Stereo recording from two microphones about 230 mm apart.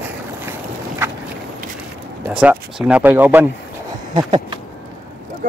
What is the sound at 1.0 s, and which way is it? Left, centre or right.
Walk, centre.